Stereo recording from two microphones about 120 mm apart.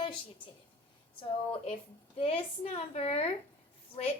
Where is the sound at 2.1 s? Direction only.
55° left (ahead or behind).